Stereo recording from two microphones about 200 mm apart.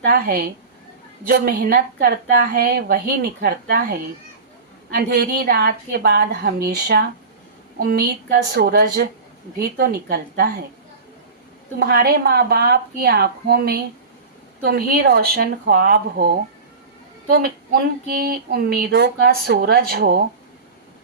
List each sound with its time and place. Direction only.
0.0 s speech: 50° right (ahead or behind)
4.9 s speech: 55° right (ahead or behind)
11.8 s speech: 50° right (ahead or behind)